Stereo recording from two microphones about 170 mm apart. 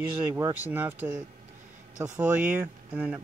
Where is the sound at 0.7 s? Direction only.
10° right (ahead or behind).